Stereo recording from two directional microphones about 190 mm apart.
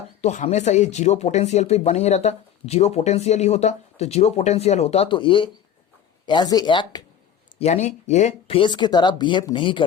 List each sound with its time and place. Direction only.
0.2 s speech: 35° left (ahead or behind)
7.6 s speech: 40° left (ahead or behind)